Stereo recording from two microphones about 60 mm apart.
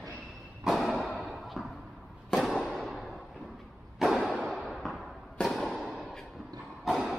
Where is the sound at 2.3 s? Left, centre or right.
Centre.